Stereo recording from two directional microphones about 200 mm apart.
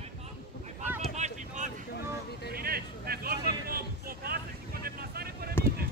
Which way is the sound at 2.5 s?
50° right (ahead or behind).